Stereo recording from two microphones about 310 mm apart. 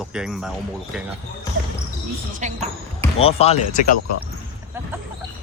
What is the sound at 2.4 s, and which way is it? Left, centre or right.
Basketball bounce, right.